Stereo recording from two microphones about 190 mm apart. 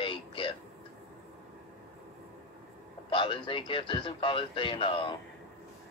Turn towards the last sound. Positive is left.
turn(degrees=25)  # may be behind; listen again after turning